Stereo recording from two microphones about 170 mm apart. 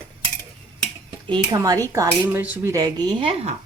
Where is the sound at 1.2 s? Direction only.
30° right (ahead or behind).